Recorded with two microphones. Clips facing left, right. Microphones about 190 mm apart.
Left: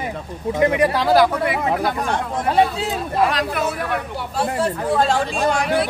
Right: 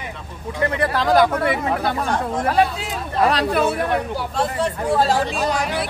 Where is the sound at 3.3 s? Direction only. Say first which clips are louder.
Right 3 dB; 35° right (ahead or behind).